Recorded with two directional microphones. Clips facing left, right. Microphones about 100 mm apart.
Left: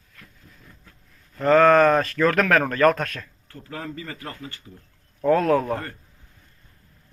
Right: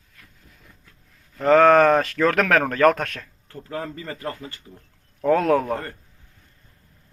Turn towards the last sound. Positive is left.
turn(degrees=-20)  # may be behind; listen again after turning